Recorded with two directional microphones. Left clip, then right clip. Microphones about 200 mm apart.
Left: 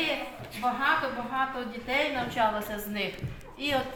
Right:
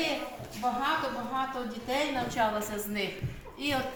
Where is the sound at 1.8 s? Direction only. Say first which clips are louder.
Left 2 dB; 5° left (ahead or behind).